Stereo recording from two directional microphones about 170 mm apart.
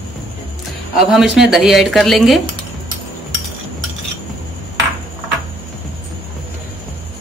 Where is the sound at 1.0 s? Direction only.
Centre (ahead or behind).